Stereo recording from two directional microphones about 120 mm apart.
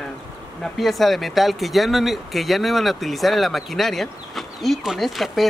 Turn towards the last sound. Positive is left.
turn(degrees=0)  # may be behind; listen again after turning